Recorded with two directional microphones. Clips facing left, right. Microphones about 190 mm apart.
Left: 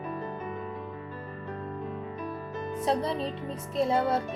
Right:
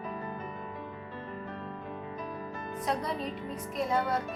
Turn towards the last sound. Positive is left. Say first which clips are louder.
# left 4 dB
turn(degrees=25)  # may be behind; listen again after turning